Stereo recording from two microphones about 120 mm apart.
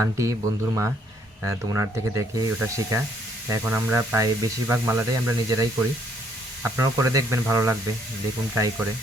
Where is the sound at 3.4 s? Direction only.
20° right (ahead or behind).